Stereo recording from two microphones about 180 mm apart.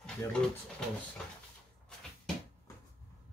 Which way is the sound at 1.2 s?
Centre (ahead or behind).